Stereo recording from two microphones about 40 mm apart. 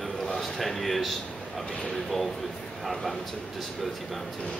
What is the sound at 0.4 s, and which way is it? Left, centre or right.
Speech, centre.